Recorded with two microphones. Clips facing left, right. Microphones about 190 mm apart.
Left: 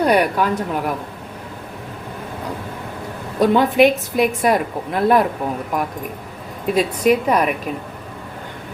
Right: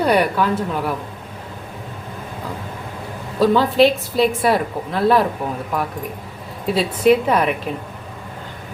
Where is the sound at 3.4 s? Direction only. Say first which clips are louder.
Left 1 dB; 20° left (ahead or behind).